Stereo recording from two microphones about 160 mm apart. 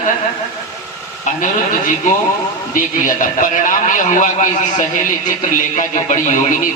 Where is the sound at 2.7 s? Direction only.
55° left (ahead or behind).